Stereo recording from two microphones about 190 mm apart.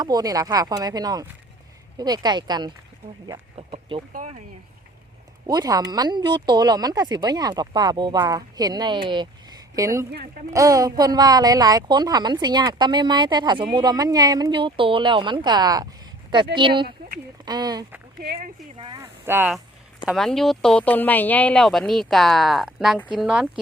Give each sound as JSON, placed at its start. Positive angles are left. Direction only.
{"t": 0.0, "sound": "speech", "side_deg": -20}
{"t": 4.1, "sound": "speech", "side_deg": -40}
{"t": 5.5, "sound": "speech", "side_deg": -20}
{"t": 18.2, "sound": "speech", "side_deg": -55}
{"t": 18.8, "sound": "a sound", "side_deg": -20}
{"t": 20.1, "sound": "speech", "side_deg": 0}